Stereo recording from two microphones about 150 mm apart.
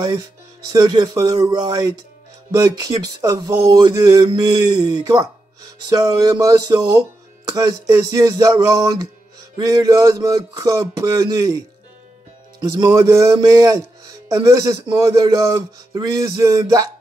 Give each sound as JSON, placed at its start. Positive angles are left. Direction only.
{"t": 0.7, "sound": "speech", "side_deg": -25}